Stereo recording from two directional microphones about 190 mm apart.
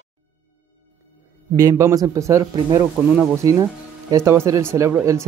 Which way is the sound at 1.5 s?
15° right (ahead or behind).